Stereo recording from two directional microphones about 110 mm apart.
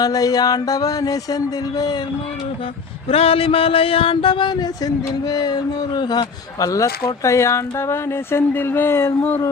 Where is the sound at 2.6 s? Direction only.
60° left (ahead or behind); by 6.8 s 30° left (ahead or behind).